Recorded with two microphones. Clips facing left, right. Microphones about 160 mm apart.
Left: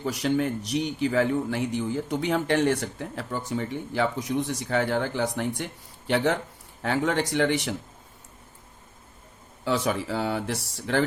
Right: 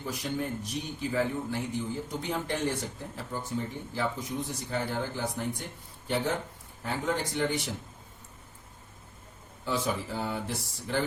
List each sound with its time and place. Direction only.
0.0 s a man's voice: 75° left (ahead or behind)
9.6 s a man's voice: 80° left